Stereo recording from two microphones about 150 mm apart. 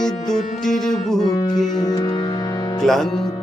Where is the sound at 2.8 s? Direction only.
Centre (ahead or behind).